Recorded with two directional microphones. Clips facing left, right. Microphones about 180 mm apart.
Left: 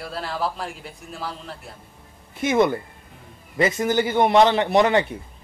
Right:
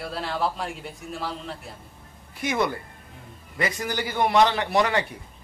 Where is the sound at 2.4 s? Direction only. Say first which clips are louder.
Left 6 dB; 20° left (ahead or behind).